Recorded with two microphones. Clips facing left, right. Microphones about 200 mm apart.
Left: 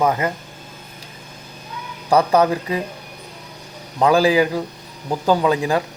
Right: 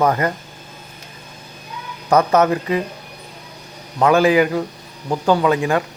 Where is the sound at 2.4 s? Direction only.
30° left (ahead or behind).